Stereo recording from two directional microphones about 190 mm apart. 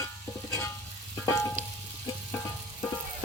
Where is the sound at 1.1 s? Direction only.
15° left (ahead or behind).